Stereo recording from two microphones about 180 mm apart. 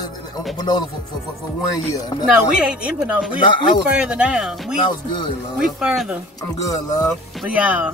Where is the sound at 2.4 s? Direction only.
5° right (ahead or behind).